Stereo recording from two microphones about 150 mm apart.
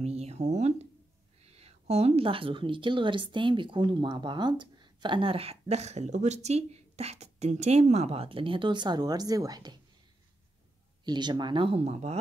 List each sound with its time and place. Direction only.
0.0 s a sound: 45° right (ahead or behind)
1.4 s a woman's voice: 45° right (ahead or behind); by 9.8 s 25° right (ahead or behind)
11.1 s a woman's voice: 30° right (ahead or behind); by 12.2 s 45° right (ahead or behind)